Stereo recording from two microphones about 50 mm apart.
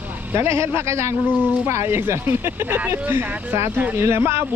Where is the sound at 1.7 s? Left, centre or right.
Right.